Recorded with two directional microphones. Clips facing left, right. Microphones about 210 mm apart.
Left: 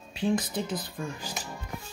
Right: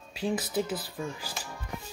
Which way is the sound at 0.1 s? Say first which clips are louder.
Left 2 dB; 5° right (ahead or behind).